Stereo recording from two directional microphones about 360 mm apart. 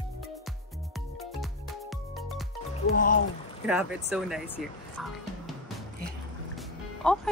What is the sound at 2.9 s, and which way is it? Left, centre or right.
Speech, left.